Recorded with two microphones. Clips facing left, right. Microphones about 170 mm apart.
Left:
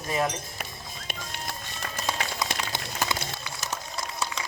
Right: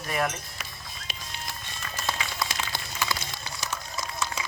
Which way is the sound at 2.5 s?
55° left (ahead or behind).